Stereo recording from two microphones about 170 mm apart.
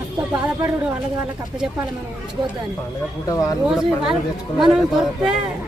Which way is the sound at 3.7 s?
5° right (ahead or behind).